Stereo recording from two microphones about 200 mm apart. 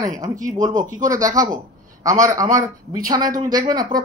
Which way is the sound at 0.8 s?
40° right (ahead or behind).